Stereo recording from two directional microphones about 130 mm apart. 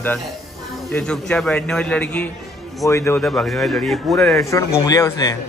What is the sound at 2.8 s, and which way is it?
Speech, 20° left (ahead or behind).